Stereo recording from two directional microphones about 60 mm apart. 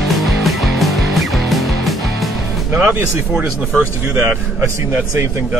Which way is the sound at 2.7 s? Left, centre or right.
Right.